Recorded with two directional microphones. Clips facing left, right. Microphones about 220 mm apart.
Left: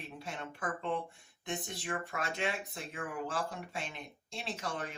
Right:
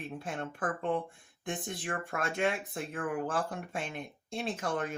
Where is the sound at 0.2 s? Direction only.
50° right (ahead or behind).